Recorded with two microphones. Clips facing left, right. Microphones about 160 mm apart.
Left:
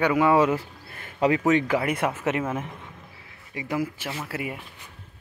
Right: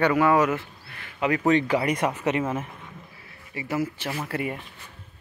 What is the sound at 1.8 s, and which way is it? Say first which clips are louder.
Speech: right 1 dB; 10° left (ahead or behind).